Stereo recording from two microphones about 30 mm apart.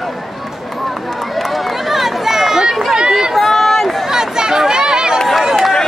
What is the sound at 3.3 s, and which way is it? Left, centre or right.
Run, centre.